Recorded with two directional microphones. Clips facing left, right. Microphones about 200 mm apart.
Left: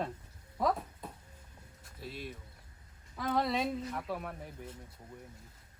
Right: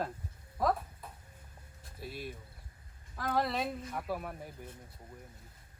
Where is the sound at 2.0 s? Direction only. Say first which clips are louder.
Right 1 dB; 5° right (ahead or behind).